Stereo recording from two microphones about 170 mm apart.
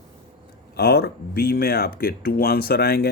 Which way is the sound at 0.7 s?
65° left (ahead or behind).